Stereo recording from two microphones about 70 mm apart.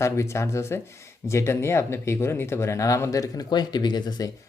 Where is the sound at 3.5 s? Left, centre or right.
Left.